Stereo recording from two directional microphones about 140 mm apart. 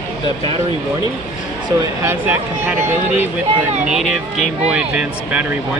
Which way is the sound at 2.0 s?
15° right (ahead or behind).